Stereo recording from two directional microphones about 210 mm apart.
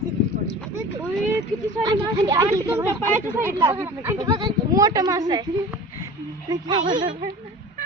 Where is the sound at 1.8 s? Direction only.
20° right (ahead or behind).